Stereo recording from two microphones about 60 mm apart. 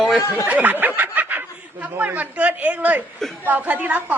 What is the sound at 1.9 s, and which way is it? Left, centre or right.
A woman's voice, right.